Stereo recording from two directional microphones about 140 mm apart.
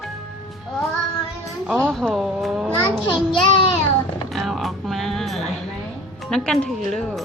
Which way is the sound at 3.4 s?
40° left (ahead or behind).